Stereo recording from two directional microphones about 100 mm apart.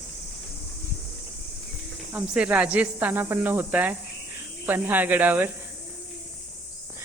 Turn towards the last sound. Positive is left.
turn(degrees=-15)  # may be behind; listen again after turning